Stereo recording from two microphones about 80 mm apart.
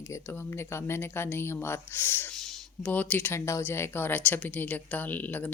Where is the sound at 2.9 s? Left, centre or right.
Centre.